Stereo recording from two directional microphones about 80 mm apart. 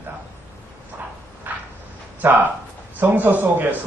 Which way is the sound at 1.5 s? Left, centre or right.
Right.